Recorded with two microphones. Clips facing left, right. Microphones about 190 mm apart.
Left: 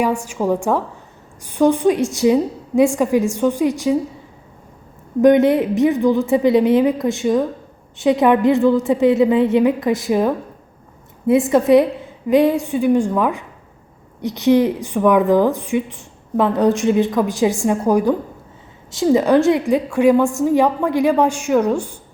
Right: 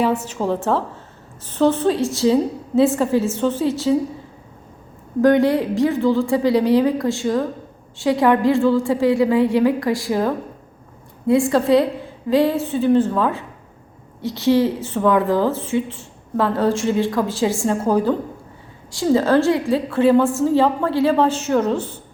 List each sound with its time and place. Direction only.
0.0 s a woman's voice: 10° left (ahead or behind)
5.2 s a woman's voice: 20° left (ahead or behind)